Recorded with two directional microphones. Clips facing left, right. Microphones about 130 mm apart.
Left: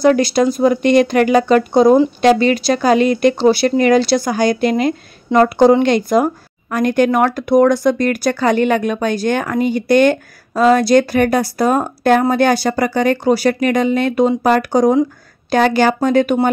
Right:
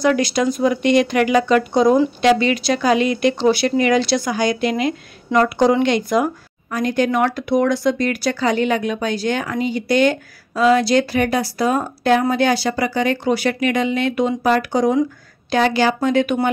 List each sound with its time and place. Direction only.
0.0 s speech: 35° left (ahead or behind)
6.7 s speech: 55° left (ahead or behind)